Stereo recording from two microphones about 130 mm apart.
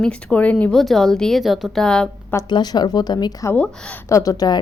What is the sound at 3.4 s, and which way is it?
Speech, 10° left (ahead or behind).